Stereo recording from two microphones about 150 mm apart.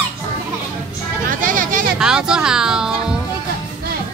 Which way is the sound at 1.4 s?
60° right (ahead or behind).